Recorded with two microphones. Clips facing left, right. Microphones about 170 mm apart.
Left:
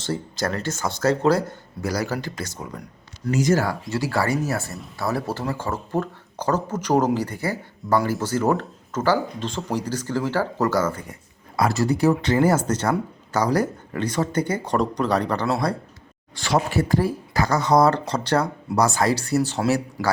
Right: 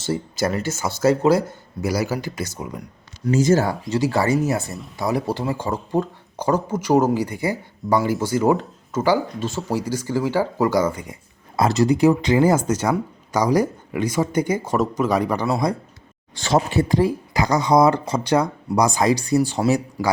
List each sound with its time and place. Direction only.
0.0 s speech: 10° right (ahead or behind)
3.3 s speech: 25° right (ahead or behind)